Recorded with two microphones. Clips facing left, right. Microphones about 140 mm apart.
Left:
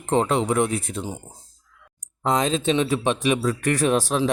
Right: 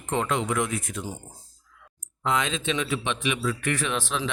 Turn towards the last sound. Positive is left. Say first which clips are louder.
# left 8 dB
turn(degrees=40)  # may be behind; listen again after turning